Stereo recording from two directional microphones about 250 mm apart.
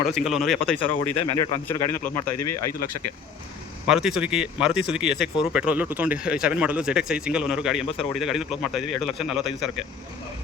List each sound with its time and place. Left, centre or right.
0.1 s speech: centre
2.3 s speech: left
3.8 s speech: centre